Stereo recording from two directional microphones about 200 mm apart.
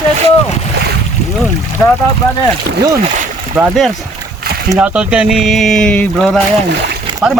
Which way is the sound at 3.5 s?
10° right (ahead or behind).